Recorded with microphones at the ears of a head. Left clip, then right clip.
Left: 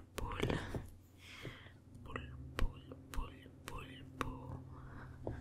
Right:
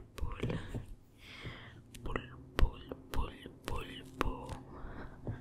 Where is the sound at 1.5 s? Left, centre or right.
Right.